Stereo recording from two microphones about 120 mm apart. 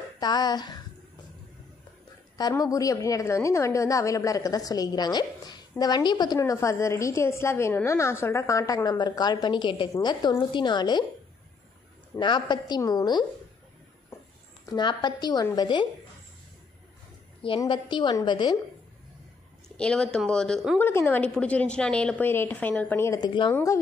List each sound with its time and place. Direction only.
0.2 s a woman's voice: 35° left (ahead or behind)
2.6 s a woman's voice: 30° left (ahead or behind)
12.2 s a woman's voice: 40° left (ahead or behind)
14.7 s a woman's voice: 40° left (ahead or behind)
17.6 s a woman's voice: 40° left (ahead or behind)
19.8 s speech: 5° left (ahead or behind)
20.8 s a woman's voice: 15° left (ahead or behind)
23.2 s a woman's voice: 40° left (ahead or behind)
23.5 s a woman's voice: 25° left (ahead or behind)